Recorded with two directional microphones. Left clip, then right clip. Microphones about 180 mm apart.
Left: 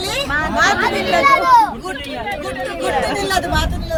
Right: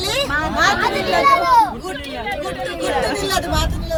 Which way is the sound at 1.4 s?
30° left (ahead or behind).